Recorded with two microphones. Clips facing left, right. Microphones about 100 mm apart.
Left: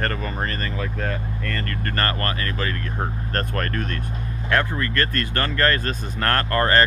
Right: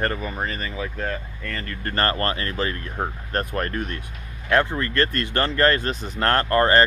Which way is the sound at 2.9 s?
15° right (ahead or behind).